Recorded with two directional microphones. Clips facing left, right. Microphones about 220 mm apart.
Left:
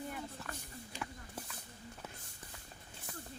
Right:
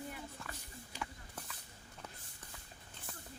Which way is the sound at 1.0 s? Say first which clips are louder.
Left 1 dB; centre (ahead or behind).